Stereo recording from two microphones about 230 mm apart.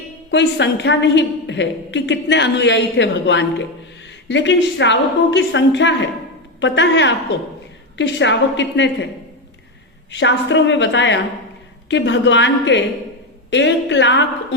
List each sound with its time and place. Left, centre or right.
0.3 s a woman's voice: left
10.1 s a woman's voice: left